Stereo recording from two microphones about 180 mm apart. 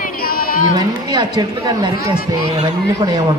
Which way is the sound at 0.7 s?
25° right (ahead or behind).